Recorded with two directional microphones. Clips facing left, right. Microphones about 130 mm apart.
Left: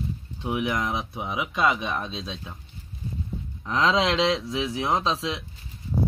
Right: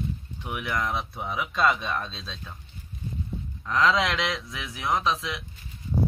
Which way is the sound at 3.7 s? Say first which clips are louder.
Left 1 dB; 25° left (ahead or behind).